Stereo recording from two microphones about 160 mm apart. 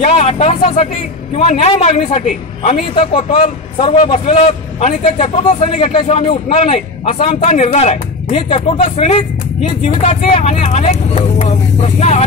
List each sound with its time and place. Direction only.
0.0 s a man's voice: 45° left (ahead or behind)